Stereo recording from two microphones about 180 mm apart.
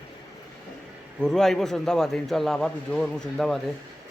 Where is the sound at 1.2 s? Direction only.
5° left (ahead or behind).